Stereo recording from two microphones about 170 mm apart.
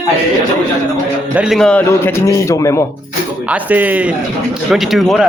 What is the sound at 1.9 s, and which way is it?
Speech, 15° left (ahead or behind).